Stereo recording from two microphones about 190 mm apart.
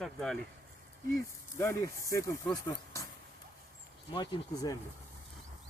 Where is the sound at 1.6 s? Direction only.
15° left (ahead or behind).